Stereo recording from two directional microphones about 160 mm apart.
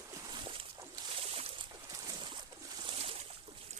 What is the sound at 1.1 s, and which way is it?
Boat, 40° right (ahead or behind).